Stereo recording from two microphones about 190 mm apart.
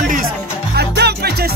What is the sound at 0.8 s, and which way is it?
Music, 60° right (ahead or behind).